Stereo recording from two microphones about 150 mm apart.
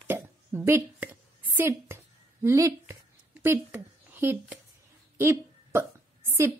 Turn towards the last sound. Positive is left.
turn(degrees=-20)  # may be behind; listen again after turning